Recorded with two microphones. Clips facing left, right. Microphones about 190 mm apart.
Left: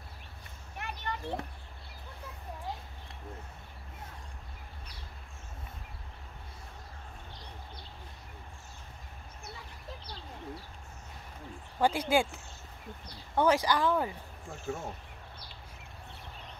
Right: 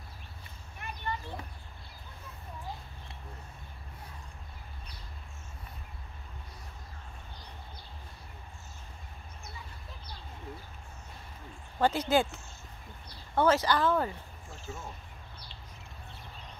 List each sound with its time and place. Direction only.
0.7 s a sound: 70° left (ahead or behind)
11.8 s speech: 10° left (ahead or behind)
14.7 s speech: 60° left (ahead or behind)